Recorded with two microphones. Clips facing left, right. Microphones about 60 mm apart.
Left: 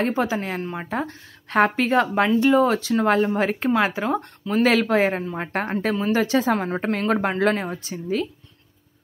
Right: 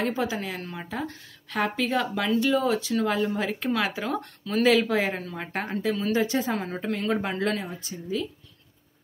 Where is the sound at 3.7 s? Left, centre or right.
Left.